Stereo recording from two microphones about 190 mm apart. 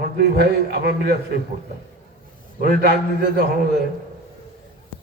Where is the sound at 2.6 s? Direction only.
50° right (ahead or behind).